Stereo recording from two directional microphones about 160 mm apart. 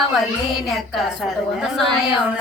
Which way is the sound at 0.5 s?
Centre (ahead or behind).